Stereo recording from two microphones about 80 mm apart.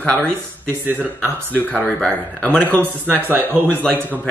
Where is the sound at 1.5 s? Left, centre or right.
Centre.